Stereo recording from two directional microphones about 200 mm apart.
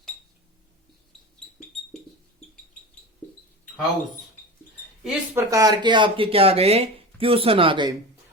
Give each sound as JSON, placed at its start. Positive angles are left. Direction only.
{"t": 5.0, "sound": "speech", "side_deg": -10}